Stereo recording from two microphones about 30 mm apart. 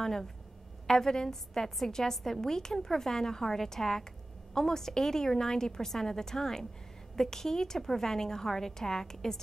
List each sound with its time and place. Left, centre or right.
0.0 s a woman's voice: centre